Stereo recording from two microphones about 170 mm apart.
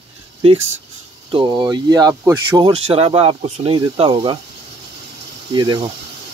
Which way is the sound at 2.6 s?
30° right (ahead or behind).